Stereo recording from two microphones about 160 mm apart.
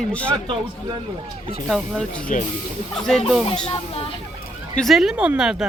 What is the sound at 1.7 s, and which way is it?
Speech, 5° left (ahead or behind).